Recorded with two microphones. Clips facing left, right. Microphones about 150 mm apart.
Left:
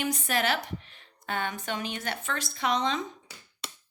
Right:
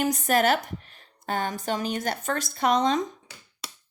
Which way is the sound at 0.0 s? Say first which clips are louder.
Right 6 dB; 45° right (ahead or behind).